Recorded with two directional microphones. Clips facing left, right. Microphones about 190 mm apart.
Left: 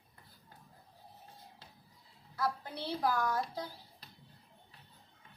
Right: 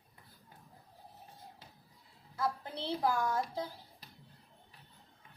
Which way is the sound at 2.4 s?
20° right (ahead or behind).